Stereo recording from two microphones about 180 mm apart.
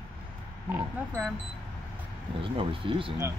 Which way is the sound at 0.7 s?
10° right (ahead or behind).